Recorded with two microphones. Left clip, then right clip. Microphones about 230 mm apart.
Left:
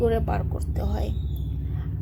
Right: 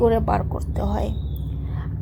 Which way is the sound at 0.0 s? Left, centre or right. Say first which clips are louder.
Right 5 dB; centre.